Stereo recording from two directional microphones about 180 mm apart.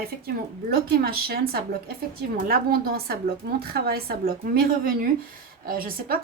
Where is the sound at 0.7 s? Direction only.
55° right (ahead or behind).